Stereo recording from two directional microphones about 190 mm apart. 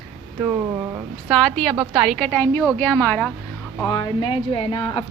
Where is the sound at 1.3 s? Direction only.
Centre (ahead or behind).